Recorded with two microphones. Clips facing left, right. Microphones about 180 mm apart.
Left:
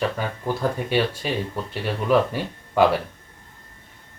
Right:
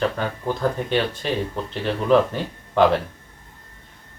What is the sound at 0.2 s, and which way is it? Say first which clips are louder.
Speech: right 1 dB; 10° left (ahead or behind).